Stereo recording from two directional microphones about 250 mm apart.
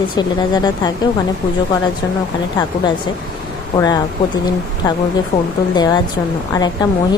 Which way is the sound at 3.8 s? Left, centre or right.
Centre.